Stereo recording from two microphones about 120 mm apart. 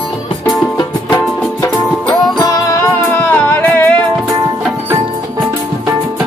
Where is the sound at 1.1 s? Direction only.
30° left (ahead or behind).